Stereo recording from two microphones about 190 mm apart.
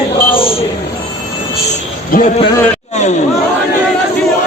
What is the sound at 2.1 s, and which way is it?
Speech, 50° left (ahead or behind).